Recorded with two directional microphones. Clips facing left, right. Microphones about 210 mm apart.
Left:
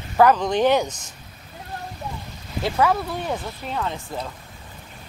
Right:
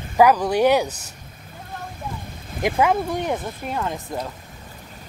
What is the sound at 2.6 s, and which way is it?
Speech, 15° right (ahead or behind).